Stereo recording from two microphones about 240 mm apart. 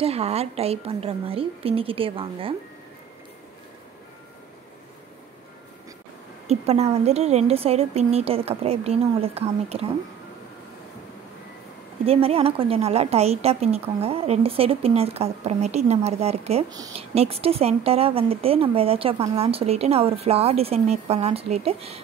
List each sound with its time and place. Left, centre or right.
0.0 s speech: right
6.4 s speech: right
12.1 s speech: right